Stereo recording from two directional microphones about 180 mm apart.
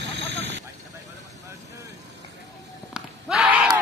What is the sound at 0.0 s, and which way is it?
Vehicle, 75° right (ahead or behind).